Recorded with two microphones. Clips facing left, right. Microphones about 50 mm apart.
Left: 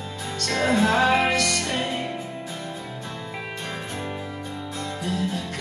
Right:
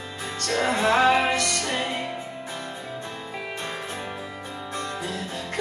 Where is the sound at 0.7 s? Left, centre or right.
Right.